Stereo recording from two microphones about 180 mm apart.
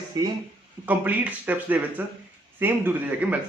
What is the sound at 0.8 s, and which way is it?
Speech, 10° right (ahead or behind).